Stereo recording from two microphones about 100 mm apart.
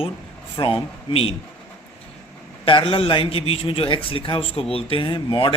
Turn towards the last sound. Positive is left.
turn(degrees=55)  # may be behind; listen again after turning